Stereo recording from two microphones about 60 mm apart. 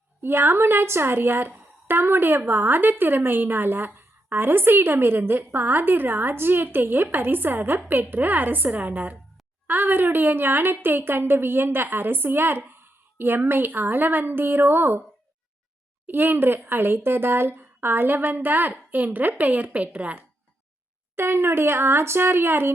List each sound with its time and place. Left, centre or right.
0.2 s a woman's voice: right
16.0 s a woman's voice: right
21.2 s a woman's voice: right